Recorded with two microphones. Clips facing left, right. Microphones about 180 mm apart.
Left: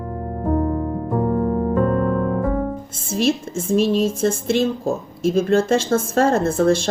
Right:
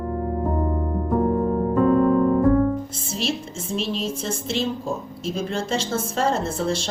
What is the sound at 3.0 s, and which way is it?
Speech, 50° left (ahead or behind).